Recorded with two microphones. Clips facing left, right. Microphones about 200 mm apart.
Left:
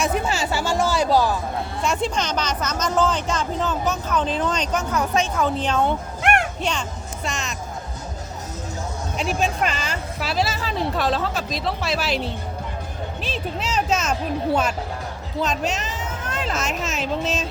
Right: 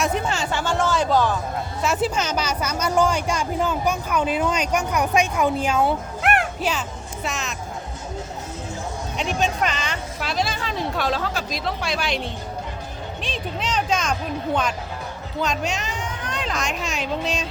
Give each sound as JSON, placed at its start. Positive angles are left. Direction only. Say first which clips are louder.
{"t": 0.0, "sound": "speech", "louder": "left 1 dB", "side_deg": 5}
{"t": 1.8, "sound": "a woman's voice", "louder": "right 1 dB", "side_deg": -5}
{"t": 9.1, "sound": "speech", "louder": "even", "side_deg": 5}